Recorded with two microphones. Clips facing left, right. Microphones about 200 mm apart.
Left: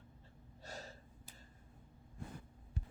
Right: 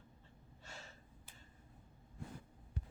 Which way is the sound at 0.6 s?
40° left (ahead or behind).